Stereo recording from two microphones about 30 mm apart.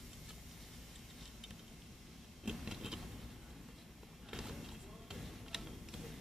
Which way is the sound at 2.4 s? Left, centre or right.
Centre.